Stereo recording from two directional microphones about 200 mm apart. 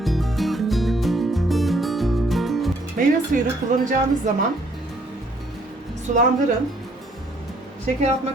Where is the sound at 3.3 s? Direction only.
45° right (ahead or behind).